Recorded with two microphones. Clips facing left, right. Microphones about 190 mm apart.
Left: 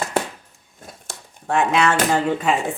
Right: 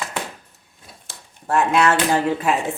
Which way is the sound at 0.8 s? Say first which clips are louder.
Left 6 dB; 45° left (ahead or behind).